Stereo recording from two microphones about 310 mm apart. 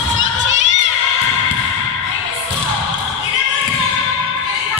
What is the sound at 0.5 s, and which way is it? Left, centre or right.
Crowd, right.